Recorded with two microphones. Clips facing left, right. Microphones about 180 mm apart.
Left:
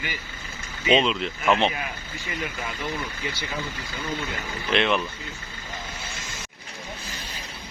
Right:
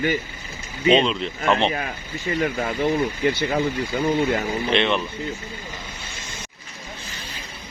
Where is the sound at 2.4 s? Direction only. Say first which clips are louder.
Right 10 dB; 55° right (ahead or behind).